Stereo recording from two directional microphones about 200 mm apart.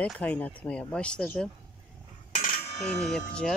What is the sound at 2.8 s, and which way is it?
Speech, 5° left (ahead or behind).